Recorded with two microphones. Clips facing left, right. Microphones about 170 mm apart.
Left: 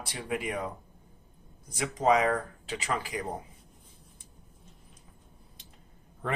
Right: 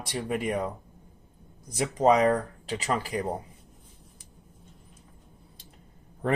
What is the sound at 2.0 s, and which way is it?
Speech, 40° right (ahead or behind).